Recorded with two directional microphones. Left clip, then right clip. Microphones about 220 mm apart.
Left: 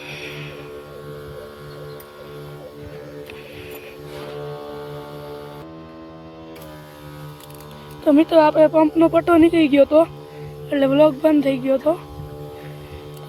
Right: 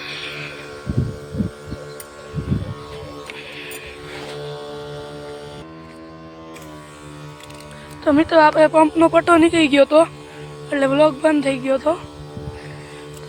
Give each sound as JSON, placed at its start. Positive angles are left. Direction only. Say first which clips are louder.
{"t": 0.0, "sound": "a sound", "louder": "right 4 dB", "side_deg": 30}
{"t": 4.4, "sound": "music", "louder": "right 1 dB", "side_deg": -45}
{"t": 8.0, "sound": "speech", "louder": "right 1 dB", "side_deg": 15}